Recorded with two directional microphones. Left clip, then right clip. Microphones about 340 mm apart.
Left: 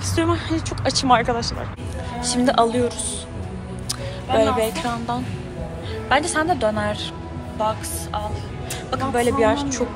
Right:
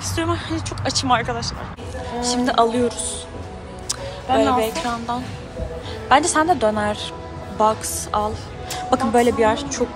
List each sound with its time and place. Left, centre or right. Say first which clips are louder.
0.1 s a woman's voice: left 2 dB; centre
4.3 s a woman's voice: right 1 dB; centre